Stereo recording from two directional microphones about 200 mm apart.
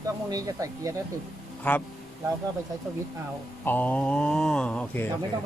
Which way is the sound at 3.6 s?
10° left (ahead or behind).